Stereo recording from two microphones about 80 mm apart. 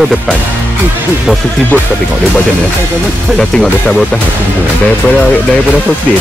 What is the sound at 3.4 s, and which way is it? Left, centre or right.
Speech, centre.